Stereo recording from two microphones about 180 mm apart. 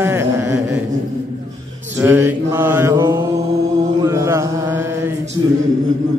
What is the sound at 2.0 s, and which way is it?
Mantra, 10° right (ahead or behind).